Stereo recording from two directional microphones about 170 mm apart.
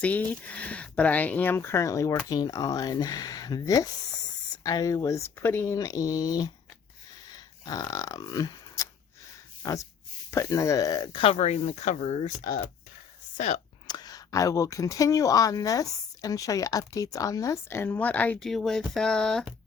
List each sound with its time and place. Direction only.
0.0 s speech: 10° left (ahead or behind)
7.6 s grunt: 20° left (ahead or behind)
9.6 s speech: 20° left (ahead or behind); by 13.6 s 45° left (ahead or behind)
13.8 s speech: 25° left (ahead or behind); by 19.5 s 5° left (ahead or behind)